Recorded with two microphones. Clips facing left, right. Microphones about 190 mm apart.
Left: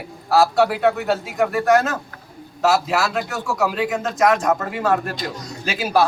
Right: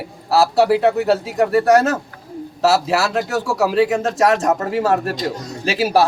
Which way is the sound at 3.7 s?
35° right (ahead or behind).